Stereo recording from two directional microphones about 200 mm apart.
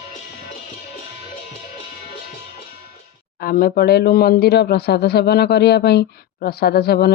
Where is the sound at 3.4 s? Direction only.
45° left (ahead or behind).